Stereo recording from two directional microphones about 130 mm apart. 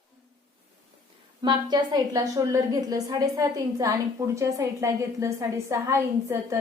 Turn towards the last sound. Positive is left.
turn(degrees=-20)  # may be behind; listen again after turning